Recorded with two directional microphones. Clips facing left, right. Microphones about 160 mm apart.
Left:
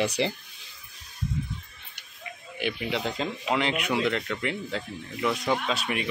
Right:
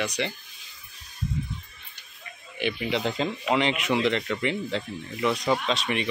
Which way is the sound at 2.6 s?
Centre (ahead or behind).